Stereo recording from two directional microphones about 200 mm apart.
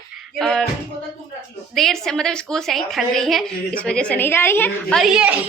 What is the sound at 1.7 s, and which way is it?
A woman's voice, centre (ahead or behind).